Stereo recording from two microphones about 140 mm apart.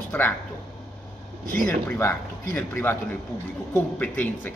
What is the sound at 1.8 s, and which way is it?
Speech, 15° left (ahead or behind).